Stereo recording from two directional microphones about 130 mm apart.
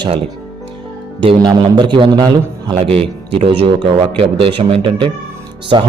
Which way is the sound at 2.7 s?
50° right (ahead or behind).